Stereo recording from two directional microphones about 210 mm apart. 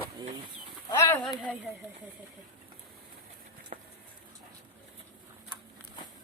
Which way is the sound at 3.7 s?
35° right (ahead or behind).